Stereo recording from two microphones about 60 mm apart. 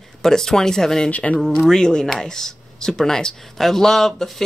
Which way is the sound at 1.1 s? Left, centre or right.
Left.